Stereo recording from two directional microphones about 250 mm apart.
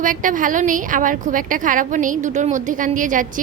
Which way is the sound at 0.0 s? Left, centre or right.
Right.